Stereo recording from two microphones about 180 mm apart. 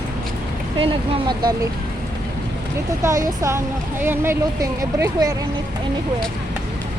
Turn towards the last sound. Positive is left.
turn(degrees=-20)  # may be behind; listen again after turning